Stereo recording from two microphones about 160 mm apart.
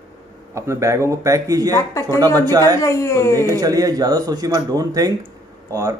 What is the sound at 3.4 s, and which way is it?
Speech, 20° right (ahead or behind).